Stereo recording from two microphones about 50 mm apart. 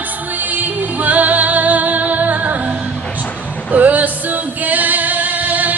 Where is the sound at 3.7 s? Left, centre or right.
Right.